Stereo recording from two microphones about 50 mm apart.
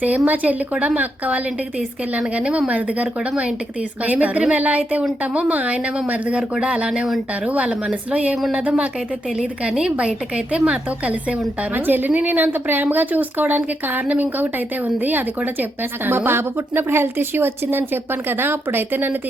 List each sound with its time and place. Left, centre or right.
0.3 s speech: right
11.7 s speech: right